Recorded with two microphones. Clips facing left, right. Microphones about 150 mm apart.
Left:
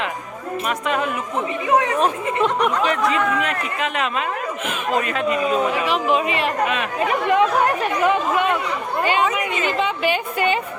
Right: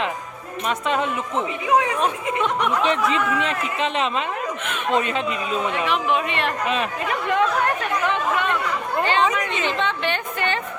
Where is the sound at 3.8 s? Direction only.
30° right (ahead or behind).